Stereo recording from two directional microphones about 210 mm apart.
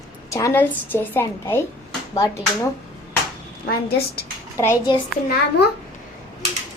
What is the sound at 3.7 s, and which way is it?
Speech, 45° left (ahead or behind).